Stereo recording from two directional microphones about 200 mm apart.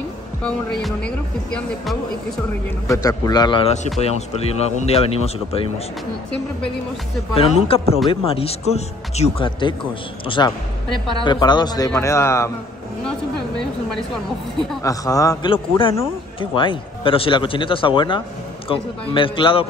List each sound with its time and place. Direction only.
0.8 s speech: 5° left (ahead or behind)
2.9 s speech: 20° left (ahead or behind)
7.3 s a man's voice: 30° left (ahead or behind)
13.6 s speech: 5° left (ahead or behind)
14.8 s a man's voice: 15° left (ahead or behind)